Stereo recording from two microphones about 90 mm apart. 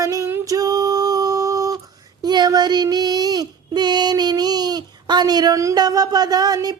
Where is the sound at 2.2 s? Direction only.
50° right (ahead or behind).